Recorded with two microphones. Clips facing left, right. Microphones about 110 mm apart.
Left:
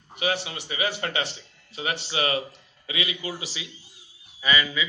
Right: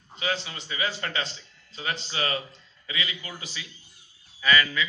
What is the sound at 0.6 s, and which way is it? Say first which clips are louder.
A man's voice: left 3 dB; 70° left (ahead or behind).